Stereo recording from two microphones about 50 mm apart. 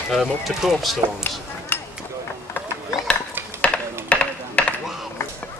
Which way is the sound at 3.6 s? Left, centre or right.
Left.